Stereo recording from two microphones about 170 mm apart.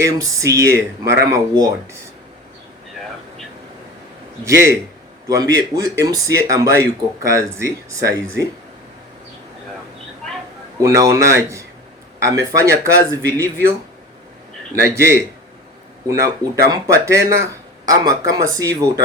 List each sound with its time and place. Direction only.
0.0 s speech: 20° right (ahead or behind)
4.4 s speech: 15° right (ahead or behind)
10.8 s speech: 20° right (ahead or behind)
14.8 s speech: 15° right (ahead or behind)